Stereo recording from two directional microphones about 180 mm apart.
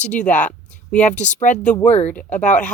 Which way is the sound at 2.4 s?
45° left (ahead or behind).